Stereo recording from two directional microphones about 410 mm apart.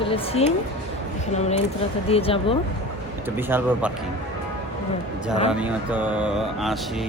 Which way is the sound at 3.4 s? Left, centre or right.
Centre.